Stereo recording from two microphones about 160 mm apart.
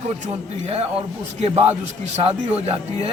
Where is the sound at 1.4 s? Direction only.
40° right (ahead or behind).